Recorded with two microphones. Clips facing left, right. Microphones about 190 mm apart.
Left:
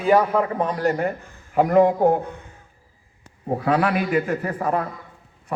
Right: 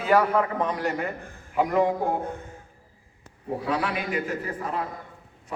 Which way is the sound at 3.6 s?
60° left (ahead or behind).